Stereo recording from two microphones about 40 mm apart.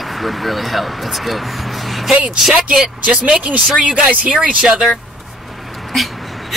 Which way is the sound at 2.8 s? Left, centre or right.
Right.